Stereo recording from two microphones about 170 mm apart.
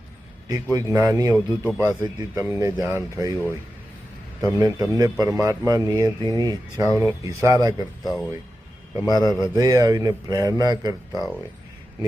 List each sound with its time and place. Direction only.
0.4 s a man's voice: 20° right (ahead or behind)
4.4 s a man's voice: 20° right (ahead or behind)
8.0 s speech: centre (ahead or behind)
9.0 s a man's voice: 20° right (ahead or behind)